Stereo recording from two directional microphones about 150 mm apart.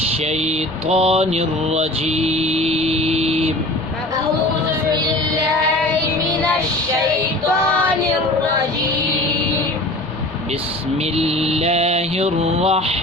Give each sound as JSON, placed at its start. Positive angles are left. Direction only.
{"t": 0.3, "sound": "mantra", "side_deg": -45}
{"t": 11.0, "sound": "mantra", "side_deg": -45}